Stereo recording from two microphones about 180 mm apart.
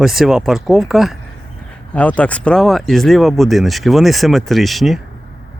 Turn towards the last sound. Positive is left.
turn(degrees=0)  # may be behind; listen again after turning